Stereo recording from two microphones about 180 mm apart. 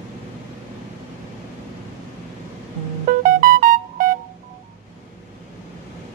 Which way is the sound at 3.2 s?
50° right (ahead or behind).